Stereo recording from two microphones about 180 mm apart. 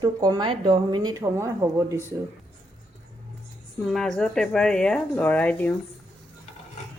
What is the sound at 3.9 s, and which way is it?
Speech, 5° left (ahead or behind).